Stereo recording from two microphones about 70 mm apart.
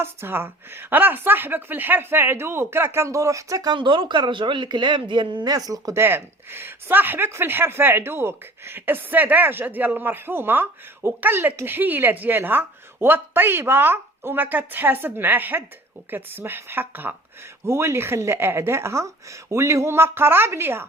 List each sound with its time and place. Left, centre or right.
0.0 s speech: right
3.7 s speech: right
5.9 s speech: right